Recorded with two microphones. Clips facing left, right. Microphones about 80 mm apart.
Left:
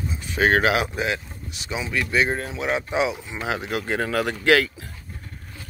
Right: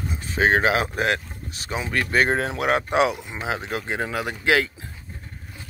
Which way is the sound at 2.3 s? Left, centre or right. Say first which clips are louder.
Right 4 dB; right.